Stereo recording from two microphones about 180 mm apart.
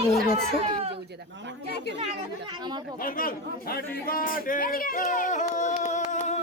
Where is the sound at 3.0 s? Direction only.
50° left (ahead or behind).